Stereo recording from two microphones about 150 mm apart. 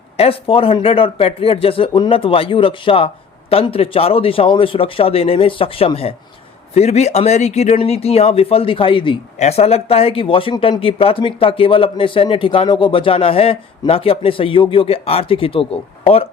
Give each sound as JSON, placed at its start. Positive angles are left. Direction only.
{"t": 0.2, "sound": "speech", "side_deg": 40}